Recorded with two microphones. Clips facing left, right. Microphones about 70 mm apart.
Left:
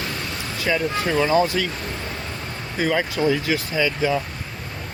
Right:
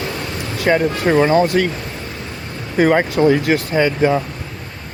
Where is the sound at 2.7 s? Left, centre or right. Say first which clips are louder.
Right 8 dB; right.